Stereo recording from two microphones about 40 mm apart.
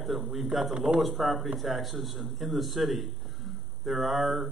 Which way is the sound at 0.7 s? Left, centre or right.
Centre.